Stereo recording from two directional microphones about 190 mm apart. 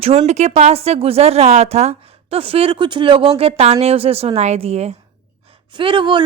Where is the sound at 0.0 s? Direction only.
30° right (ahead or behind).